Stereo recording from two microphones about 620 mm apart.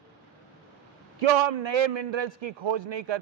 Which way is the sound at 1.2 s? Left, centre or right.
Right.